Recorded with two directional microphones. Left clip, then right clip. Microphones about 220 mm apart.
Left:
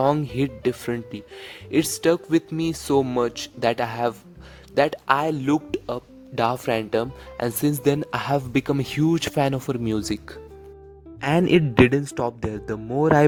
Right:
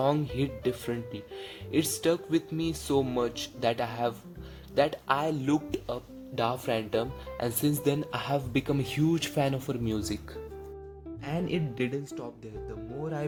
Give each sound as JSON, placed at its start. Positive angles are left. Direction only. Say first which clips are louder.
{"t": 0.0, "sound": "speech", "louder": "left 7 dB", "side_deg": 45}
{"t": 11.2, "sound": "speech", "louder": "left 14 dB", "side_deg": 45}